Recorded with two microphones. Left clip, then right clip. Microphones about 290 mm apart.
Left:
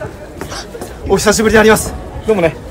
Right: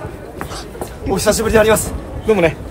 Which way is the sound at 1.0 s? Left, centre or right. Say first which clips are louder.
Left 4 dB; left.